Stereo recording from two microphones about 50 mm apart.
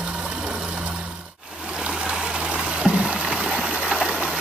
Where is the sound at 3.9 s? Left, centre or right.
Centre.